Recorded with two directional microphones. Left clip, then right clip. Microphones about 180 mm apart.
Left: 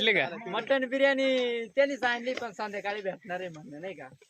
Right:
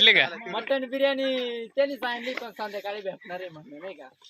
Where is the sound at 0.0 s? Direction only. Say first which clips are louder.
Right 7 dB; centre (ahead or behind).